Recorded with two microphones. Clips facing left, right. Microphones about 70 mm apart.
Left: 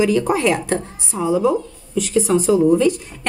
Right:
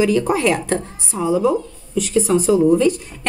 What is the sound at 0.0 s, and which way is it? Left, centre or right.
A woman's voice, centre.